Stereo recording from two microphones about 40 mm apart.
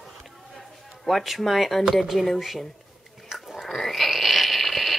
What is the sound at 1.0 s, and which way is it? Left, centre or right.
A woman's voice, centre.